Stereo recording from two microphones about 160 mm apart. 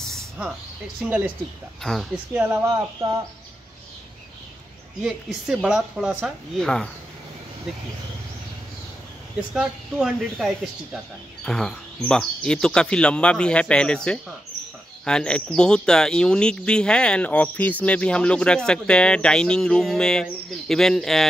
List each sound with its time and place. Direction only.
0.0 s a sound: centre (ahead or behind)
1.0 s speech: 10° right (ahead or behind)
1.8 s speech: centre (ahead or behind)
2.3 s speech: 15° right (ahead or behind)
5.0 s speech: centre (ahead or behind)
9.5 s speech: 5° right (ahead or behind)